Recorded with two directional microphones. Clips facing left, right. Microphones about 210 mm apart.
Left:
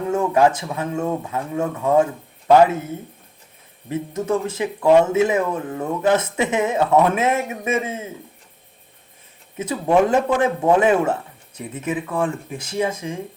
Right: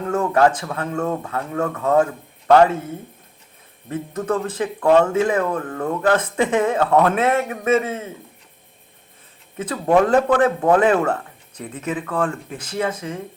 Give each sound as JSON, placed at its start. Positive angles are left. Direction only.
{"t": 0.1, "sound": "speech", "side_deg": 10}
{"t": 3.8, "sound": "speech", "side_deg": 10}
{"t": 9.6, "sound": "speech", "side_deg": 10}